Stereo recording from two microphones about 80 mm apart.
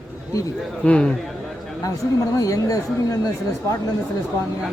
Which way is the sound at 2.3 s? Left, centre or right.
Left.